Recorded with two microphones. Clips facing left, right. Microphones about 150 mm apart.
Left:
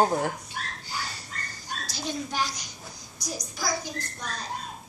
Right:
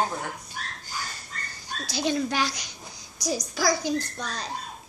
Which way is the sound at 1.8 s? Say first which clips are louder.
Right 8 dB; 75° right (ahead or behind).